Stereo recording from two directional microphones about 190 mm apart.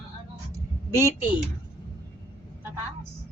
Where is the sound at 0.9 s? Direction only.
15° right (ahead or behind).